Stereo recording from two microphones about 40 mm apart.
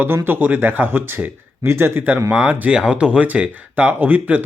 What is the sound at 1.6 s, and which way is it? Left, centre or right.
Speech, right.